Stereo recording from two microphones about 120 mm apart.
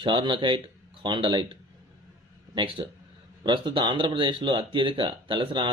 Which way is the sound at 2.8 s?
40° right (ahead or behind).